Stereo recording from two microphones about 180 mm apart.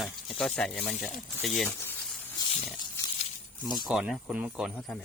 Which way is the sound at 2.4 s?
30° left (ahead or behind).